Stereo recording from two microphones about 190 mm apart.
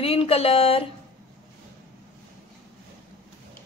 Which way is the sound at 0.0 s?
30° left (ahead or behind).